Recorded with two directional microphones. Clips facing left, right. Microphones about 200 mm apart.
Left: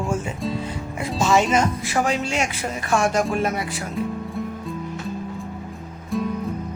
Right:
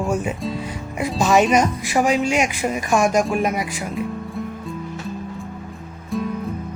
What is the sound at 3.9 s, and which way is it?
Music, centre (ahead or behind).